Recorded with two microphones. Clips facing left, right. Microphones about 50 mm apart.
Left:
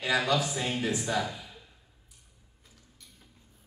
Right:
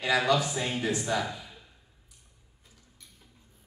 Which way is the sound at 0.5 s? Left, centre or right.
Centre.